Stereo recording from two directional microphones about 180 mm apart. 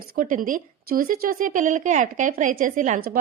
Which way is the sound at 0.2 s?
50° right (ahead or behind).